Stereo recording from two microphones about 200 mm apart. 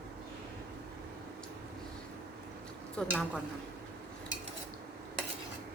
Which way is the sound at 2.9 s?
5° left (ahead or behind).